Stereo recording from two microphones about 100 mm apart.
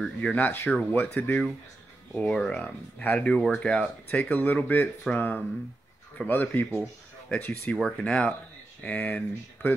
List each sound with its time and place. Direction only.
0.0 s speech: 10° left (ahead or behind)
6.7 s speech: centre (ahead or behind)
7.3 s speech: 20° left (ahead or behind)